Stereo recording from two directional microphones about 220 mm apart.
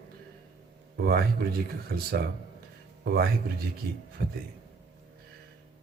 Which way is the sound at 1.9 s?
45° right (ahead or behind).